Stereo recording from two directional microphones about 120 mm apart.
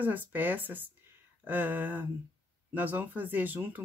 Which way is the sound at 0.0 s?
15° right (ahead or behind).